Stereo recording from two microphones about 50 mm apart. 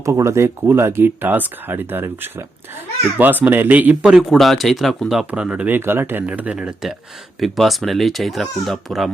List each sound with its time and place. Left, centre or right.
0.0 s speech: right
1.0 s speech: right
4.0 s speech: centre
4.4 s speech: centre
5.3 s speech: right
5.6 s speech: right
6.2 s speech: right
6.8 s speech: centre